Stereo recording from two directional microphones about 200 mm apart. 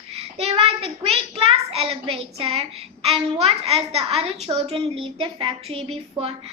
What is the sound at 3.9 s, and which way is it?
Speech, 30° right (ahead or behind).